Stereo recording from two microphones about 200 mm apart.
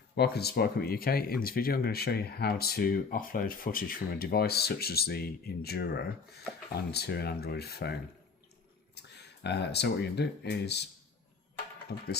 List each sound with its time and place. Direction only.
0.2 s speech: 55° left (ahead or behind)
9.0 s speech: 55° left (ahead or behind)
11.9 s speech: 50° left (ahead or behind)